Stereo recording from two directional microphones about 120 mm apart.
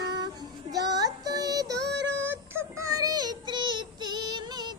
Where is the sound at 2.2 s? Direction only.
20° right (ahead or behind).